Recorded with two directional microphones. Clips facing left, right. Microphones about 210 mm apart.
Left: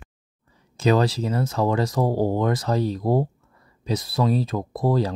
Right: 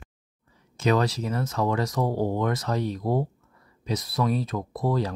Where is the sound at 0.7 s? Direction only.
30° left (ahead or behind).